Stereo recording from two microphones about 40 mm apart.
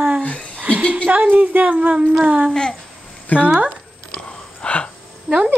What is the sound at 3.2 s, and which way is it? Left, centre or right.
Speech, left.